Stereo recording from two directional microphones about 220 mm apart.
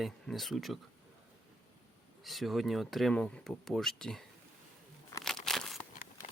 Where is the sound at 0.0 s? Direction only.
Centre (ahead or behind).